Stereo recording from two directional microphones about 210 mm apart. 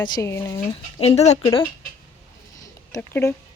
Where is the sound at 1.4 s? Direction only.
15° left (ahead or behind).